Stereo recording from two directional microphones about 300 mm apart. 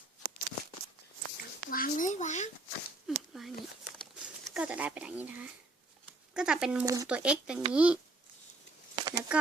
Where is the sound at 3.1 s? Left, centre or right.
Centre.